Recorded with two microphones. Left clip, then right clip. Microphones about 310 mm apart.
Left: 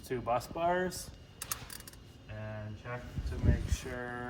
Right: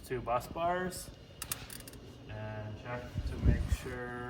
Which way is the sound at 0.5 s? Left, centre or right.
Left.